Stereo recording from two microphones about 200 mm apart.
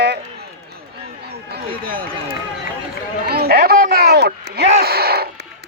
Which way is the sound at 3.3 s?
50° right (ahead or behind).